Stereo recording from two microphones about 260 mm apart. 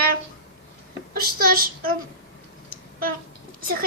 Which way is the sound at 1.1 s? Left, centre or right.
Right.